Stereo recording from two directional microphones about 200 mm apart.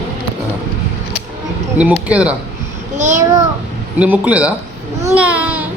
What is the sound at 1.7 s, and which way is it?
Speech, 5° right (ahead or behind).